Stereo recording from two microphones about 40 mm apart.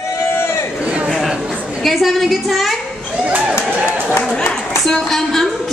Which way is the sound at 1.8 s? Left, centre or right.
Centre.